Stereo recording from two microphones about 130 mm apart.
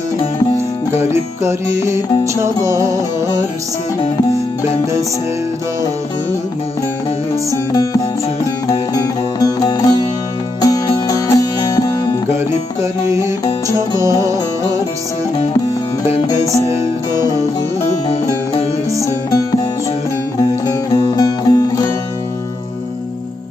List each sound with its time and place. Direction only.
0.9 s music: 20° right (ahead or behind)
7.5 s music: 30° left (ahead or behind)
12.8 s music: 25° right (ahead or behind)
17.1 s music: 30° left (ahead or behind)
18.9 s music: 25° right (ahead or behind)
19.3 s music: 30° left (ahead or behind)
20.7 s music: 30° left (ahead or behind)